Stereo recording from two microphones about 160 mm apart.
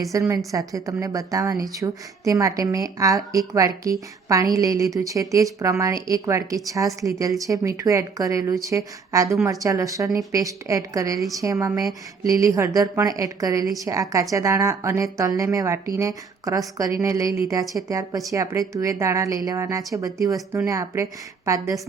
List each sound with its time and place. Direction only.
0.1 s a woman's voice: 20° right (ahead or behind)